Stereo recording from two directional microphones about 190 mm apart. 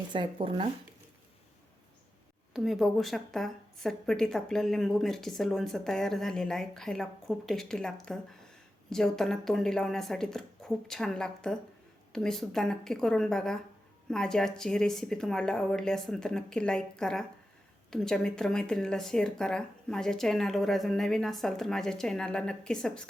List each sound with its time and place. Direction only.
0.1 s speech: 25° right (ahead or behind)
2.5 s a woman's voice: centre (ahead or behind)